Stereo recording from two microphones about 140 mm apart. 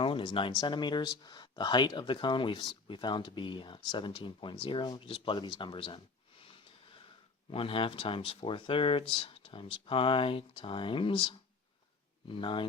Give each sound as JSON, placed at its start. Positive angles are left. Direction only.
{"t": 0.0, "sound": "speech", "side_deg": 35}
{"t": 7.5, "sound": "speech", "side_deg": 40}